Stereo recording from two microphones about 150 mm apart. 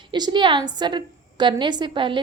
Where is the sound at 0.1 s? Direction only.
30° right (ahead or behind).